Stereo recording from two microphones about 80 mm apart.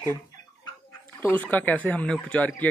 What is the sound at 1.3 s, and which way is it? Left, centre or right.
Speech, left.